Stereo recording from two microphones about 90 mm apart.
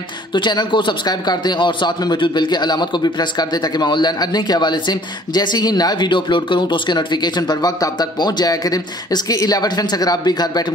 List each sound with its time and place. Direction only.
0.3 s a man's voice: 55° left (ahead or behind)